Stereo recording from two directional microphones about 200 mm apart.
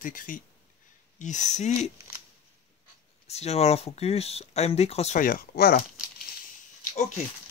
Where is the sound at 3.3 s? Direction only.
30° left (ahead or behind); by 5.8 s 50° left (ahead or behind).